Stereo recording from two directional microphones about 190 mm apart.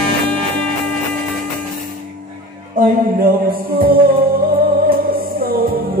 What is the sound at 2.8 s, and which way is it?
Music, 50° right (ahead or behind).